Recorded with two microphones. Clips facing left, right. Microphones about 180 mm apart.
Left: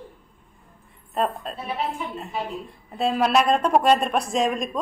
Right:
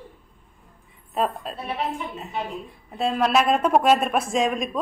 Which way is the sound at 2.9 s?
Centre (ahead or behind).